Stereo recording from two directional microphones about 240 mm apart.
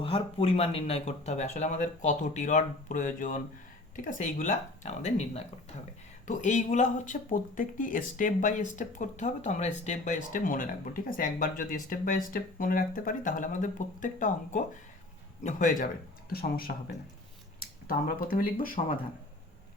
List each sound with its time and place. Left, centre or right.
0.0 s speech: left